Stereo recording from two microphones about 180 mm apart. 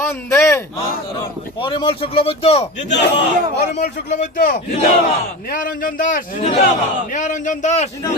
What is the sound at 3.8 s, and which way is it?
A man's voice, 40° left (ahead or behind).